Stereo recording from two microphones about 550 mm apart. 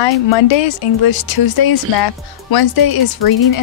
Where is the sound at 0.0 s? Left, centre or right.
Left.